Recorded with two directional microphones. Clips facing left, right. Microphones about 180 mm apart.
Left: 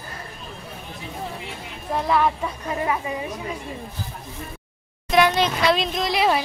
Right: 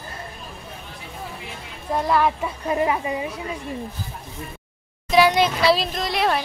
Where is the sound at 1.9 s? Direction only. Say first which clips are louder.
Right 1 dB; centre (ahead or behind).